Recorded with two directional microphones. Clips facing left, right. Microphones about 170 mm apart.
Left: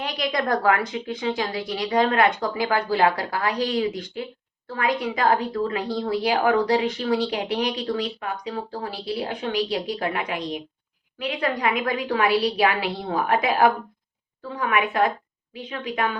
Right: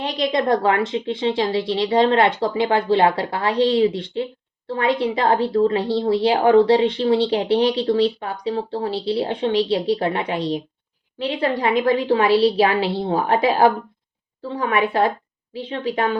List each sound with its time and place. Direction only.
0.0 s a woman's voice: 25° right (ahead or behind)